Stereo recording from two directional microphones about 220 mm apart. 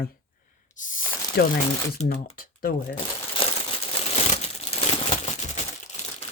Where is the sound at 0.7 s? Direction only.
35° left (ahead or behind).